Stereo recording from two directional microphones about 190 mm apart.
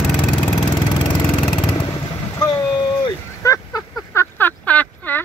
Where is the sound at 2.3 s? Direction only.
20° left (ahead or behind).